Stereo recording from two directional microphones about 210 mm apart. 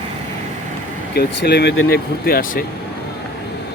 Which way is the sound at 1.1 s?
50° left (ahead or behind).